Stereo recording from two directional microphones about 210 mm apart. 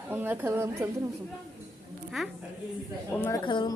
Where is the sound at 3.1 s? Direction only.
10° left (ahead or behind).